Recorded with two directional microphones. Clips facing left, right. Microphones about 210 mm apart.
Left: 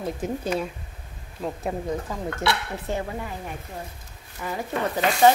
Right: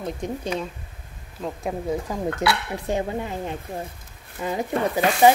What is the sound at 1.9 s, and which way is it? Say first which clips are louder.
Speech: right 3 dB; 15° right (ahead or behind).